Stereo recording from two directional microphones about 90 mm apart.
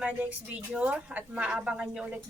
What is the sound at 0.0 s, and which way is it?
Speech, 15° right (ahead or behind).